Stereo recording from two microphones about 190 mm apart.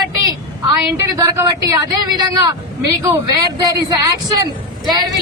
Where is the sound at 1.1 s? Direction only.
20° right (ahead or behind).